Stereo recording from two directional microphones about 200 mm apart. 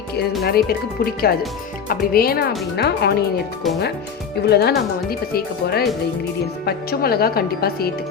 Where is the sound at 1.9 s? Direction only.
50° left (ahead or behind).